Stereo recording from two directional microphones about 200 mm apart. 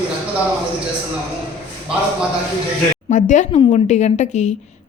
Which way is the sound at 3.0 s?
35° left (ahead or behind).